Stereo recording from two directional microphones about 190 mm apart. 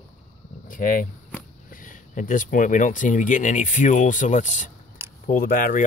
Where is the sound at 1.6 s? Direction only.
45° left (ahead or behind).